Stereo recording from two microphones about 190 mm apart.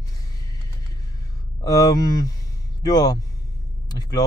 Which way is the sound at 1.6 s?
20° left (ahead or behind).